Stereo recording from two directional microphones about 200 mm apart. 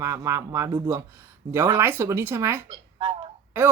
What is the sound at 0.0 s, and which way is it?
Speech, 15° right (ahead or behind).